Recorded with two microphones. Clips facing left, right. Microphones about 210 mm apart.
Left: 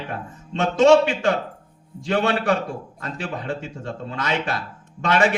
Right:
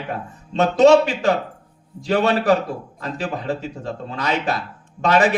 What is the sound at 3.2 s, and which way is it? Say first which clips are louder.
A man's voice: right 3 dB; 35° right (ahead or behind).